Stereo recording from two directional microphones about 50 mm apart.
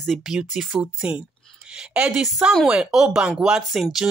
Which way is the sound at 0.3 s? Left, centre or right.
Centre.